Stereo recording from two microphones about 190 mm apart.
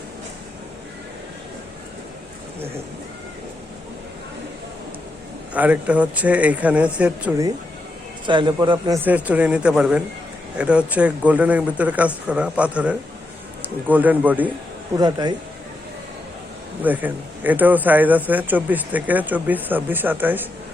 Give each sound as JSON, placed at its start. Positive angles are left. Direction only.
{"t": 5.5, "sound": "a man's voice", "side_deg": -10}
{"t": 8.3, "sound": "a man's voice", "side_deg": -25}
{"t": 9.0, "sound": "a man's voice", "side_deg": -5}
{"t": 14.9, "sound": "a man's voice", "side_deg": -20}
{"t": 16.8, "sound": "a man's voice", "side_deg": -10}